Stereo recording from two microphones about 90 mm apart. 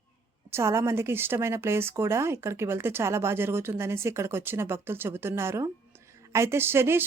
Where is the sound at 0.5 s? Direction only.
30° right (ahead or behind).